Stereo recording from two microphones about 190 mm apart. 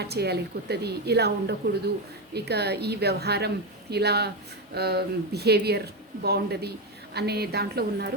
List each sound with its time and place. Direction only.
0.0 s speech: 60° right (ahead or behind)